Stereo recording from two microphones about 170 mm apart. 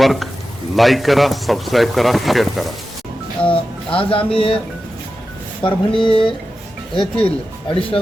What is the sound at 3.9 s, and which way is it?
Speech, 30° left (ahead or behind).